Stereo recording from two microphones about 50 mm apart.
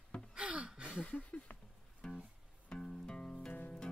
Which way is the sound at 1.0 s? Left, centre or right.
Left.